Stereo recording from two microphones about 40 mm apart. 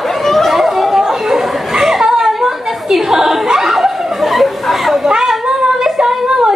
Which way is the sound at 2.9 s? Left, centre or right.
Centre.